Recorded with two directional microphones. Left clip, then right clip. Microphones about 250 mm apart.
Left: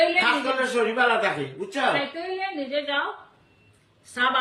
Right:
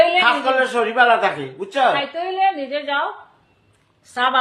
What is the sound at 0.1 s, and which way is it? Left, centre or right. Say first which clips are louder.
A woman's voice: right 6 dB; centre.